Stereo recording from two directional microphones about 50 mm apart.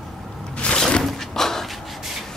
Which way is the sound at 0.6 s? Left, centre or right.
Left.